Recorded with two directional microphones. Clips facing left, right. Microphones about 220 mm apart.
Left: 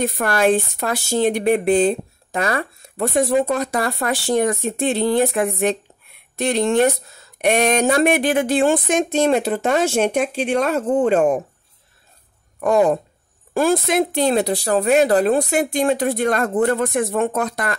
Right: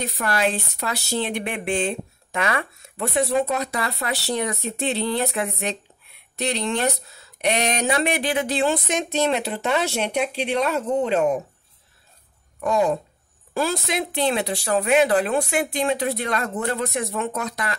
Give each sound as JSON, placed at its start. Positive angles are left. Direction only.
{"t": 0.0, "sound": "speech", "side_deg": 50}
{"t": 12.5, "sound": "speech", "side_deg": 55}